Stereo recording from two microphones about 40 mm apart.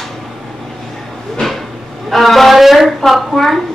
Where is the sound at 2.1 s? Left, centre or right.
Centre.